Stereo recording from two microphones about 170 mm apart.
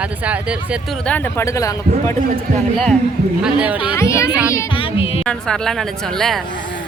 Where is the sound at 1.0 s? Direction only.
10° left (ahead or behind).